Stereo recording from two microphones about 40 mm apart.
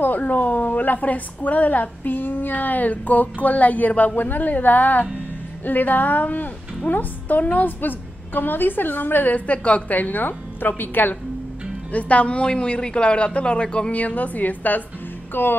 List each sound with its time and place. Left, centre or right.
0.0 s a woman's voice: left
9.5 s a woman's voice: left
9.8 s a woman's voice: left
11.9 s a man's voice: left
13.9 s a woman's voice: left
15.3 s music: left